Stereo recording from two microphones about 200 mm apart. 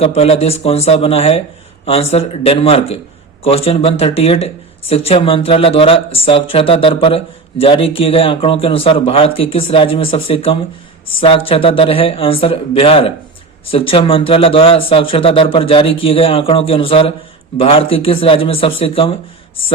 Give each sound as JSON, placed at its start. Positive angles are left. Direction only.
{"t": 0.0, "sound": "a man's voice", "side_deg": 30}